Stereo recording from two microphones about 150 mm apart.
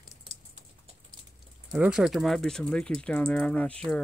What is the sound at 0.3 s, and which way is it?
Typing, 30° right (ahead or behind).